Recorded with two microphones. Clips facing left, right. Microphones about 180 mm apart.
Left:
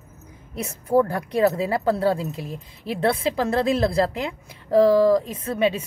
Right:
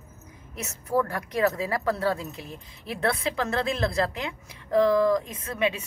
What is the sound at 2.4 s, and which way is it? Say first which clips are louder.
Speech: left 7 dB; centre (ahead or behind).